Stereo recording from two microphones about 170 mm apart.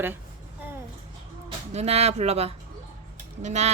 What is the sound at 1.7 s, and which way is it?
Speech, 40° right (ahead or behind).